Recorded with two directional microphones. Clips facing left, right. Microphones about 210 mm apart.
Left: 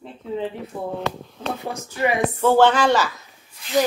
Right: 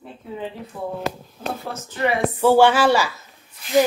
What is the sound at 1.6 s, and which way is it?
Speech, 10° left (ahead or behind).